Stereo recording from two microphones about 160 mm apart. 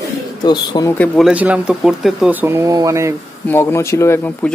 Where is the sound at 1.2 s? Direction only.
10° right (ahead or behind).